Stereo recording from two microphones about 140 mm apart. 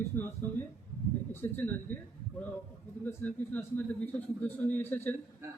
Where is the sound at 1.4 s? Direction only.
15° left (ahead or behind).